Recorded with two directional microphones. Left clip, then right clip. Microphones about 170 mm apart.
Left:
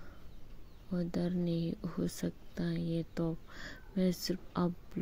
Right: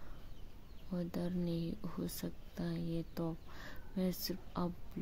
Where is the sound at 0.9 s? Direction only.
15° left (ahead or behind).